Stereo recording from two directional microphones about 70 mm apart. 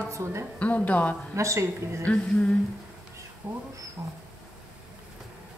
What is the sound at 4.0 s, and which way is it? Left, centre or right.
Speech, right.